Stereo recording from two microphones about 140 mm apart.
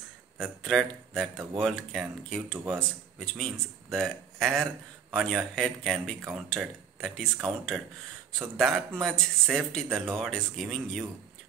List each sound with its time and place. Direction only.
0.4 s speech: centre (ahead or behind)